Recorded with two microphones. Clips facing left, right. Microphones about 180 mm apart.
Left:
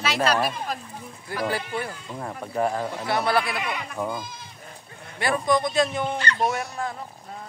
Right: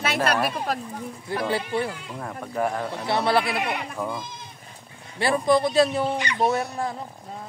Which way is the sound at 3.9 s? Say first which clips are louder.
Left 1 dB; 5° left (ahead or behind).